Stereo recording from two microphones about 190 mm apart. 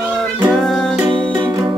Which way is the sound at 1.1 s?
25° right (ahead or behind).